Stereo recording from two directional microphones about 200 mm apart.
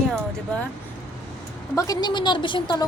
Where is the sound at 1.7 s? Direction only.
20° left (ahead or behind).